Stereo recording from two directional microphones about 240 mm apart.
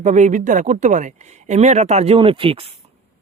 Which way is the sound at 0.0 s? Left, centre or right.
Right.